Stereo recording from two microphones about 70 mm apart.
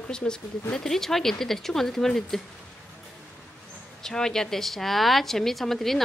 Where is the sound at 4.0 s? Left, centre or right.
Centre.